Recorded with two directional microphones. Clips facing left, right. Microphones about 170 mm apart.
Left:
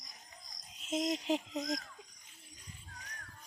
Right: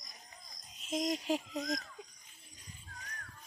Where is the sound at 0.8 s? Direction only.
25° left (ahead or behind).